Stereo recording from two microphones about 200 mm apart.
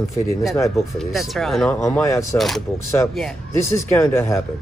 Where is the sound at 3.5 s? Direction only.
15° left (ahead or behind).